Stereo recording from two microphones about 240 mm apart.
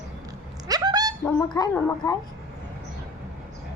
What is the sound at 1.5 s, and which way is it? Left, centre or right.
Speech, centre.